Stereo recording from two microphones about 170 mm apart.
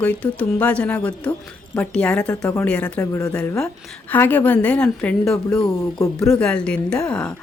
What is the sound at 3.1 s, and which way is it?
Speech, 20° left (ahead or behind).